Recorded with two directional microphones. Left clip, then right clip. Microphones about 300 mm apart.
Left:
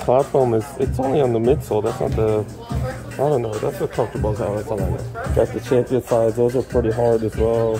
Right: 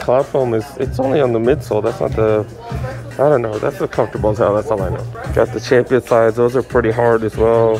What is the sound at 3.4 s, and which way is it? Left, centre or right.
Speech, centre.